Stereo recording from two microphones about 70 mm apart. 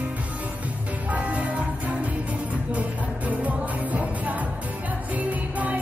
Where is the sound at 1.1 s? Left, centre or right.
Centre.